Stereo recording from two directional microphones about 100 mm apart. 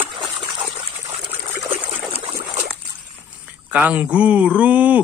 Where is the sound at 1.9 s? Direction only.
90° right.